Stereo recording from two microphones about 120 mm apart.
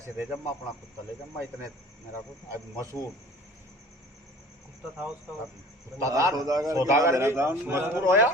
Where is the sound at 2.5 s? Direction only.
25° right (ahead or behind).